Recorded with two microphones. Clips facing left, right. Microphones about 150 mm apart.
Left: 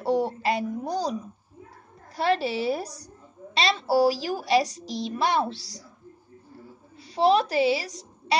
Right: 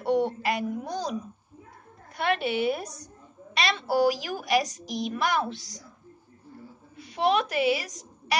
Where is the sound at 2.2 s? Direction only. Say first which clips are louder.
Left 1 dB; 35° left (ahead or behind).